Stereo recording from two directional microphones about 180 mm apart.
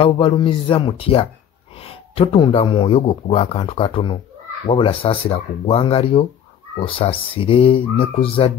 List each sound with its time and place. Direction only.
0.0 s speech: 25° left (ahead or behind)